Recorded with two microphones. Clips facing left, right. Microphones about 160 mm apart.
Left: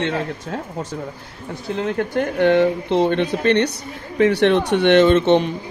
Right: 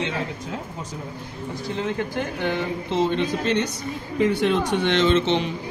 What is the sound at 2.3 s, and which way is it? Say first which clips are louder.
Speech: left 13 dB; 65° left (ahead or behind).